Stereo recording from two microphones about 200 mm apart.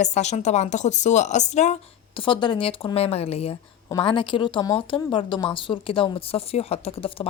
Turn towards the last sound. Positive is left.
turn(degrees=30)  # may be behind; listen again after turning